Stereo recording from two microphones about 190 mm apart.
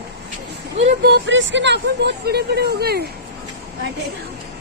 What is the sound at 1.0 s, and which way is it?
Speech, 65° right (ahead or behind).